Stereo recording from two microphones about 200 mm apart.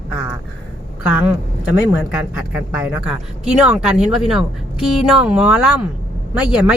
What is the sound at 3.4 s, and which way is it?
A woman's voice, 5° right (ahead or behind).